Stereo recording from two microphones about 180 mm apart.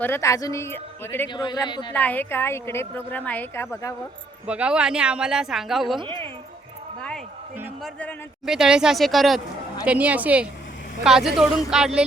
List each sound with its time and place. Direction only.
0.0 s speech: 15° left (ahead or behind)
1.3 s a man's voice: 25° left (ahead or behind)
1.9 s speech: 10° left (ahead or behind)
4.4 s speech: 5° right (ahead or behind)
7.8 s a woman's voice: 5° left (ahead or behind)